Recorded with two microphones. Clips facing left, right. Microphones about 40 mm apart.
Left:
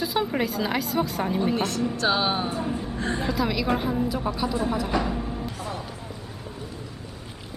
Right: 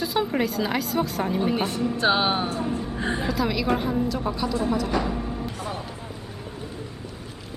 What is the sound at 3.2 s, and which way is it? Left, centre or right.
A woman's voice, centre.